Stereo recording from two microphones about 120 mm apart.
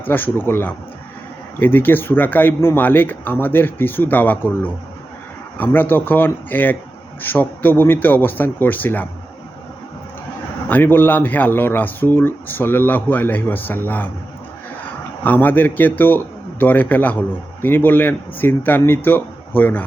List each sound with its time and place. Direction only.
0.0 s a man's voice: 15° left (ahead or behind)
5.7 s a man's voice: 15° left (ahead or behind)
10.7 s a man's voice: 15° left (ahead or behind)
15.2 s a man's voice: 15° left (ahead or behind)